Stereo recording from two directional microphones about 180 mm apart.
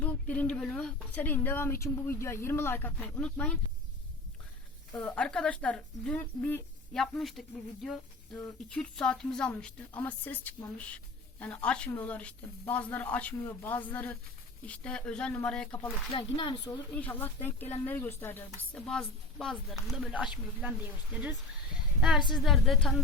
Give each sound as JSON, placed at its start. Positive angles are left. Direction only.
{"t": 0.0, "sound": "a sound", "side_deg": 10}
{"t": 0.5, "sound": "speech", "side_deg": 5}
{"t": 4.9, "sound": "speech", "side_deg": 5}
{"t": 16.1, "sound": "speech", "side_deg": 30}
{"t": 16.9, "sound": "speech", "side_deg": 10}
{"t": 18.7, "sound": "speech", "side_deg": 0}